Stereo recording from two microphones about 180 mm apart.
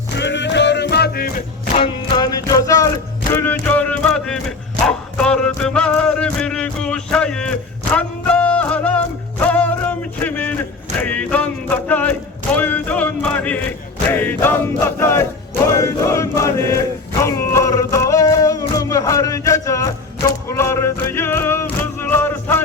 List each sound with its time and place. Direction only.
0.1 s music: 75° left (ahead or behind)
1.7 s music: 25° left (ahead or behind); by 12.1 s 10° left (ahead or behind)
12.5 s chant: 10° left (ahead or behind)
17.2 s music: 15° left (ahead or behind)